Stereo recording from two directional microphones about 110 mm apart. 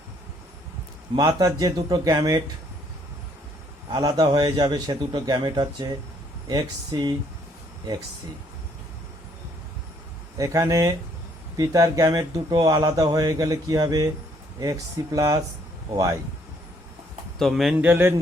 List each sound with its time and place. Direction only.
1.4 s speech: 35° right (ahead or behind)
3.9 s speech: 35° right (ahead or behind)
10.3 s speech: 30° right (ahead or behind)
17.3 s speech: centre (ahead or behind)
17.7 s speech: 20° right (ahead or behind)